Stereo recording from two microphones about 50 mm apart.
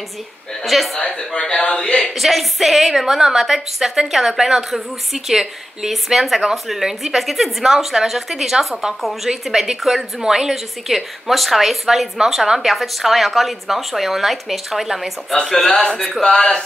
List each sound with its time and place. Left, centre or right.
0.7 s a woman's voice: centre
0.9 s a man's voice: centre
2.1 s a woman's voice: centre
15.4 s a man's voice: centre